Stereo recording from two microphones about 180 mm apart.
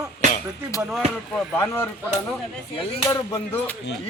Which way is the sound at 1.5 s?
10° left (ahead or behind).